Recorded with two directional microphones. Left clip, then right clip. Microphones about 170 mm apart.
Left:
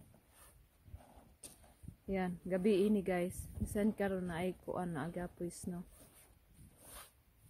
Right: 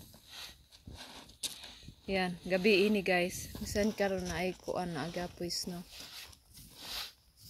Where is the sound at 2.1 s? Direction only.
20° left (ahead or behind).